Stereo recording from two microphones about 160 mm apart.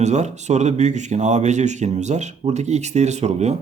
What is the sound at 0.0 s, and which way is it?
Speech, 45° right (ahead or behind).